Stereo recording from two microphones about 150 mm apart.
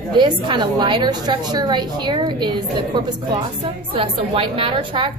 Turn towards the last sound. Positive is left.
turn(degrees=-35)  # may be behind; listen again after turning